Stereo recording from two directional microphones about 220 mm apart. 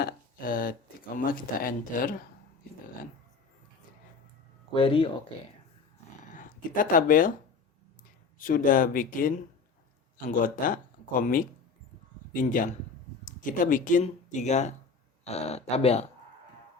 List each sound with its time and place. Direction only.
0.0 s a sound: 40° left (ahead or behind)
4.7 s speech: 25° left (ahead or behind)
6.3 s speech: 40° left (ahead or behind)
8.4 s speech: 40° left (ahead or behind)